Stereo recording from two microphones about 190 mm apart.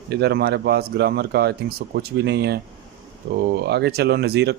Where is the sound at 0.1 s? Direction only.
60° right (ahead or behind).